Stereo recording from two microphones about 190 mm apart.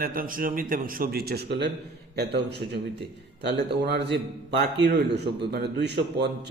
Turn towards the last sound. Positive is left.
turn(degrees=-60)  # may be behind; listen again after turning